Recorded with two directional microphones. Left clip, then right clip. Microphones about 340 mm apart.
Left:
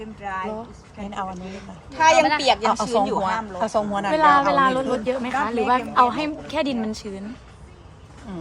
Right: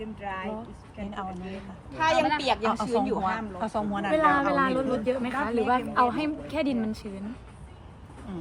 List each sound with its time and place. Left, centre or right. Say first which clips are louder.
0.3 s speech: left 7 dB; centre
1.9 s a woman's voice: left 8 dB; left
8.3 s speech: left 4 dB; centre